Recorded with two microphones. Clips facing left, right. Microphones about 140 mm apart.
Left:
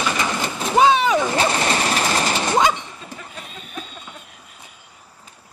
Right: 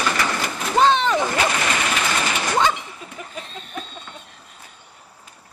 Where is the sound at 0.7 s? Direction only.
10° left (ahead or behind).